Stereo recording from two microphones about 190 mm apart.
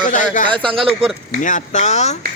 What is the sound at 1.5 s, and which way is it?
Speech, 40° left (ahead or behind).